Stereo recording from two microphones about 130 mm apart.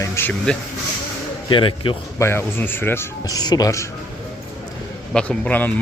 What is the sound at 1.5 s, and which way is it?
Speech, 40° left (ahead or behind).